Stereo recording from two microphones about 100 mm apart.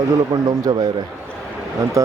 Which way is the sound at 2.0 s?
35° right (ahead or behind).